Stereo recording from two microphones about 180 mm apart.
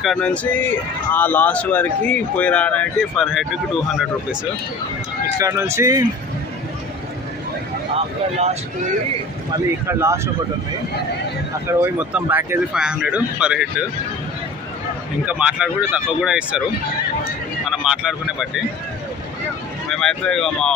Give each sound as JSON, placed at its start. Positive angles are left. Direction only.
{"t": 0.0, "sound": "speech", "side_deg": 5}
{"t": 5.4, "sound": "speech", "side_deg": -15}
{"t": 7.9, "sound": "a sound", "side_deg": -35}
{"t": 9.8, "sound": "speech", "side_deg": -15}
{"t": 11.6, "sound": "speech", "side_deg": -10}
{"t": 15.2, "sound": "speech", "side_deg": -5}
{"t": 17.6, "sound": "speech", "side_deg": -5}
{"t": 19.9, "sound": "speech", "side_deg": 5}